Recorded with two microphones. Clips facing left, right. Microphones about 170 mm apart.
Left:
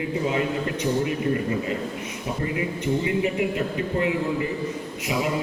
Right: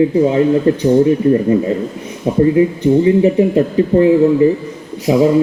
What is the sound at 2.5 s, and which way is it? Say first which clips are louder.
Speech: right 14 dB; 35° right (ahead or behind).